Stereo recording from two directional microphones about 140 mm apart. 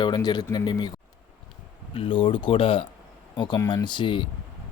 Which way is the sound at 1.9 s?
40° left (ahead or behind).